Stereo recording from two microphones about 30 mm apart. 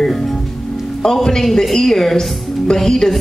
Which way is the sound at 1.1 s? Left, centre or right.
Centre.